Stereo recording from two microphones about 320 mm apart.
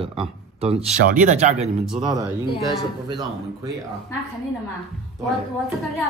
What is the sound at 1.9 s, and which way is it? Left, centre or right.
Speech, centre.